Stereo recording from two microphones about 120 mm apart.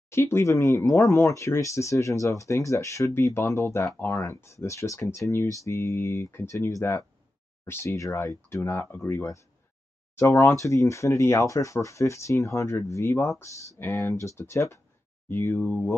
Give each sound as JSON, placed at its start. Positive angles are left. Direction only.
{"t": 0.1, "sound": "speech", "side_deg": 20}